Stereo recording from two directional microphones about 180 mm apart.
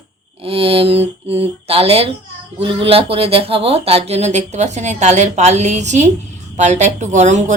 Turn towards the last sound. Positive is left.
turn(degrees=-40)  # may be behind; listen again after turning